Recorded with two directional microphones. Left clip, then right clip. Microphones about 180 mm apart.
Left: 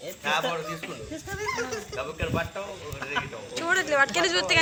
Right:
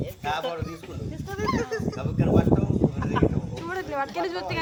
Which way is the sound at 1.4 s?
10° right (ahead or behind).